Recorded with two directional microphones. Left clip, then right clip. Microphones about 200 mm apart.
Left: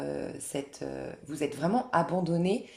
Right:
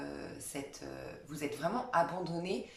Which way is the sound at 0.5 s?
45° left (ahead or behind).